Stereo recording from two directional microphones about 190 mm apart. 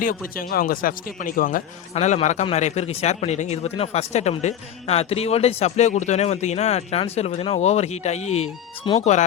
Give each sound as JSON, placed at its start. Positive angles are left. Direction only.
{"t": 0.3, "sound": "speech", "side_deg": 50}